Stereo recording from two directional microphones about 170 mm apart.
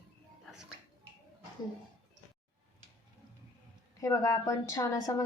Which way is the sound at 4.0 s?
20° left (ahead or behind).